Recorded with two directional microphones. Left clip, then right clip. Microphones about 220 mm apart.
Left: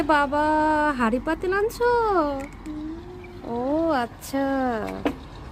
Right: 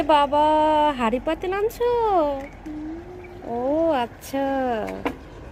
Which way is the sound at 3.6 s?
10° left (ahead or behind).